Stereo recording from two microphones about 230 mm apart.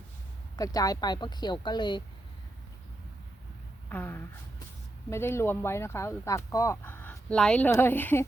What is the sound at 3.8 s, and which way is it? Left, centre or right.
Speech, centre.